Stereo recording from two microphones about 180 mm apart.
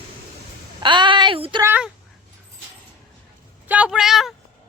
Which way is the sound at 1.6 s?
10° right (ahead or behind).